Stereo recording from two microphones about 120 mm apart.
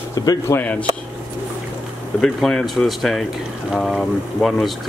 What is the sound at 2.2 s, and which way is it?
Speech, centre (ahead or behind).